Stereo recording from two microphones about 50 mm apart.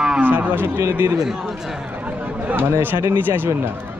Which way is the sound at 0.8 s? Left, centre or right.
Right.